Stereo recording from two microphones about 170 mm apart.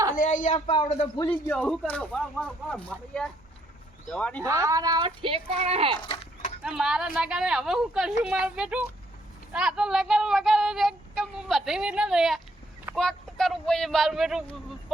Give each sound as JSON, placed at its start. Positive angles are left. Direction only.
{"t": 0.2, "sound": "speech", "side_deg": 50}
{"t": 0.9, "sound": "speech", "side_deg": 35}
{"t": 1.3, "sound": "speech", "side_deg": 10}
{"t": 4.4, "sound": "speech", "side_deg": -15}
{"t": 6.0, "sound": "a sound", "side_deg": 30}
{"t": 6.6, "sound": "speech", "side_deg": -5}